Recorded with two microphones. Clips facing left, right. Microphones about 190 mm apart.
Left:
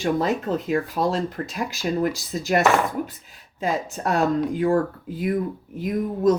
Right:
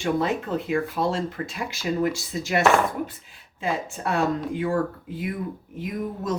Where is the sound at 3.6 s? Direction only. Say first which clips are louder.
Left 3 dB; 40° left (ahead or behind).